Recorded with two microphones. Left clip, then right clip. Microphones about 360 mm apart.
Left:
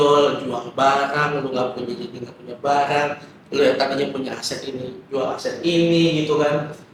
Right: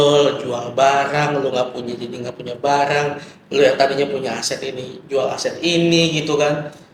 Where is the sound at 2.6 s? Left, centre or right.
Right.